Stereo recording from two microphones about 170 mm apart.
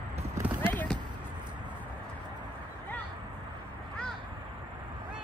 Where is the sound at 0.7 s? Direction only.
10° left (ahead or behind).